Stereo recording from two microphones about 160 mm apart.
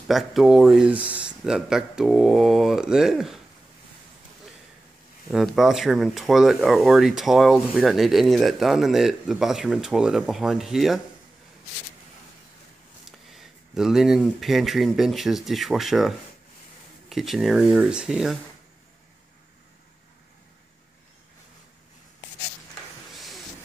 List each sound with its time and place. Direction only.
0.1 s speech: centre (ahead or behind)
5.3 s speech: centre (ahead or behind)
13.0 s speech: centre (ahead or behind)
23.1 s train: centre (ahead or behind)